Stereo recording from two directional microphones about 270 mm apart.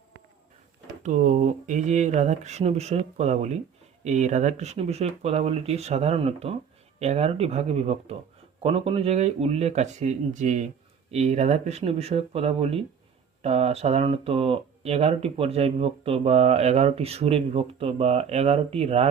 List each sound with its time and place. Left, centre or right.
1.0 s speech: right